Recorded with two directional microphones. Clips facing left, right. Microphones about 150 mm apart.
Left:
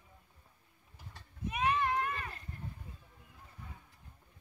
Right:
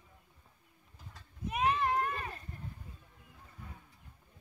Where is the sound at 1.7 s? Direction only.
40° right (ahead or behind).